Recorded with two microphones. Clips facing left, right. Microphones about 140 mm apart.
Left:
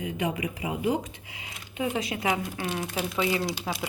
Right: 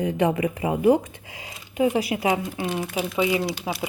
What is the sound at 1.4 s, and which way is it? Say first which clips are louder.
Speech: right 8 dB; 30° right (ahead or behind).